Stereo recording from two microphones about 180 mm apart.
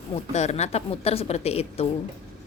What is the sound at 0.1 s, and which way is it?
Speech, 40° left (ahead or behind).